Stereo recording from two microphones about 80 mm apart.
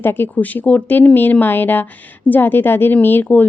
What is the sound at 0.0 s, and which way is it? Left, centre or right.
Speech, left.